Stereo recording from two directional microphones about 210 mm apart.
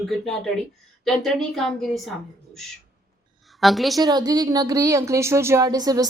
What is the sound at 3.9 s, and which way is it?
Speech, 20° right (ahead or behind).